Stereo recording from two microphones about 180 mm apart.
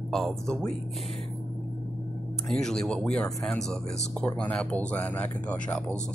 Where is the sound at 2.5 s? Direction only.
5° left (ahead or behind).